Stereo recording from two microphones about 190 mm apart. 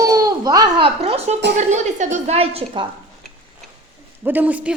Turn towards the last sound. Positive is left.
turn(degrees=-10)  # may be behind; listen again after turning